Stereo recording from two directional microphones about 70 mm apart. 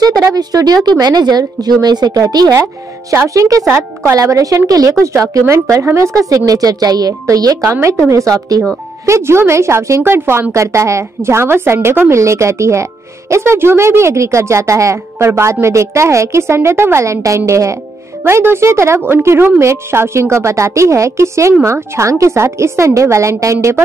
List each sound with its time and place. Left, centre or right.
0.3 s a woman's voice: right
2.6 s a woman's voice: right
7.7 s a woman's voice: right
9.0 s a woman's voice: right
18.2 s a woman's voice: right